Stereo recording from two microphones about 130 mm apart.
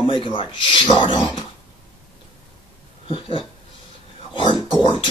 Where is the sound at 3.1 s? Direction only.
40° left (ahead or behind).